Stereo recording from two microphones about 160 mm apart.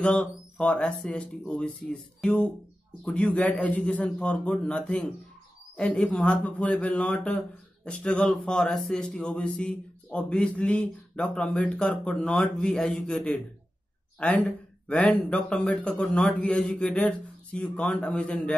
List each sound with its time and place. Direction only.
0.0 s speech: 5° left (ahead or behind)